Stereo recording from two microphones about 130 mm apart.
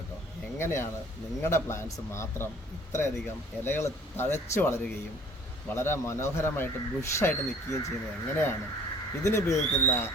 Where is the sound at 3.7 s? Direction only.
20° left (ahead or behind).